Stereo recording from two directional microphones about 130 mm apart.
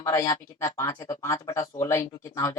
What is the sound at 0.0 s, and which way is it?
Speech, 25° left (ahead or behind).